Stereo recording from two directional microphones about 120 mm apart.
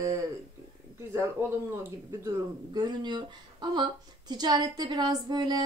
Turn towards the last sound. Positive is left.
turn(degrees=-35)  # may be behind; listen again after turning